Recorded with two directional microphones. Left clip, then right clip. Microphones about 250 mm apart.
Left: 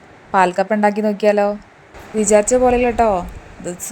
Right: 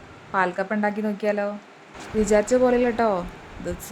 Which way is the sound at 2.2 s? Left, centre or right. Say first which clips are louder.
Left 6 dB; centre.